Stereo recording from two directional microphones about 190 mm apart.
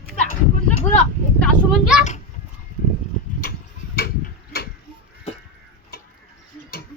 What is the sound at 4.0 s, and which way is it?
Tick-tock, 55° left (ahead or behind).